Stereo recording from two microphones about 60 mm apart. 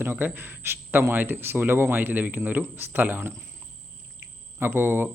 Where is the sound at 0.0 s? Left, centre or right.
Right.